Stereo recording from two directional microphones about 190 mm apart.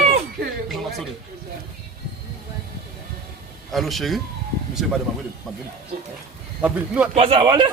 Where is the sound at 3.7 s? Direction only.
Centre (ahead or behind).